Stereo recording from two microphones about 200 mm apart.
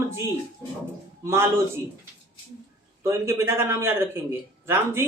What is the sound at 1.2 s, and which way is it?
Speech, 15° right (ahead or behind).